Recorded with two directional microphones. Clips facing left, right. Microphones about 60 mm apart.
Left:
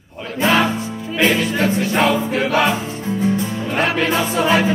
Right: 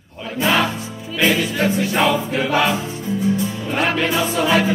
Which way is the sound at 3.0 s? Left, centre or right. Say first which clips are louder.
Left 1 dB; left.